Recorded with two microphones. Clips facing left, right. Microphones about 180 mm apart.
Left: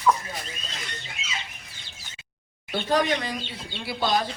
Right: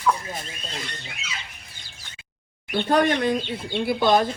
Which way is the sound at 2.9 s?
55° right (ahead or behind).